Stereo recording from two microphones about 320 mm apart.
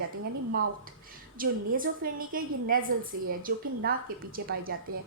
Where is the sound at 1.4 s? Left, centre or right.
Right.